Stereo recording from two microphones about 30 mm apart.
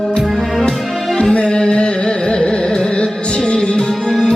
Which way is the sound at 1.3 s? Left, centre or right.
Left.